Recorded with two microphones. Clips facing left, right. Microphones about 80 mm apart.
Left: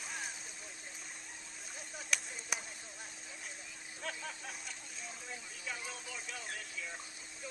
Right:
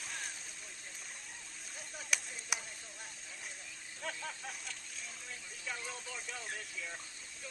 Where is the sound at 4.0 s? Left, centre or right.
Centre.